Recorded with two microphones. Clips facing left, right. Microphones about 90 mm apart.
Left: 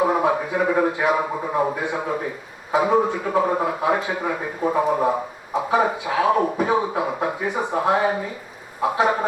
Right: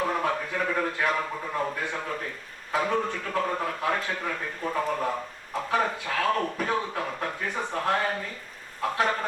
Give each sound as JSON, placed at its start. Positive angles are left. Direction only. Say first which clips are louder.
{"t": 0.0, "sound": "a man's voice", "louder": "left 8 dB", "side_deg": 15}
{"t": 1.3, "sound": "a man's voice", "louder": "left 8 dB", "side_deg": 25}